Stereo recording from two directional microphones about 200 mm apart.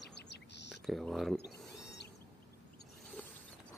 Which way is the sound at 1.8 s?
55° left (ahead or behind).